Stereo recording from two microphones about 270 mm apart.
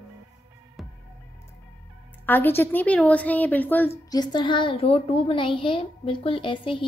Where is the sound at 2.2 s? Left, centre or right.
Centre.